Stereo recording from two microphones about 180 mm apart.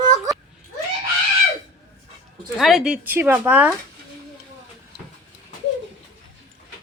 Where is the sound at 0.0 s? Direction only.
20° right (ahead or behind).